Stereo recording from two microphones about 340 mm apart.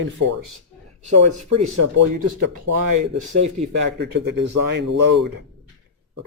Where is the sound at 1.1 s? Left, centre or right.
Right.